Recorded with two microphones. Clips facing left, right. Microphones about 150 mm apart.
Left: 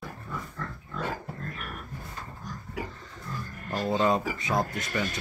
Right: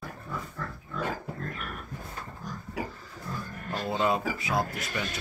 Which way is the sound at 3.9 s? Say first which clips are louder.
Left 2 dB; 5° right (ahead or behind).